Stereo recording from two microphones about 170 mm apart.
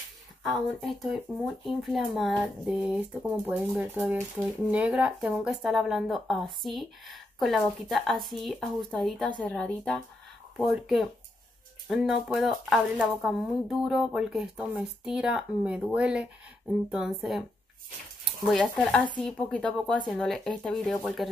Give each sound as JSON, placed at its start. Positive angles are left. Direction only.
{"t": 0.4, "sound": "speech", "side_deg": 0}